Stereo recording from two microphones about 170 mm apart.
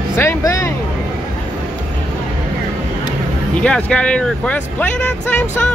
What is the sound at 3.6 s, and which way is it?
Speech, 5° left (ahead or behind).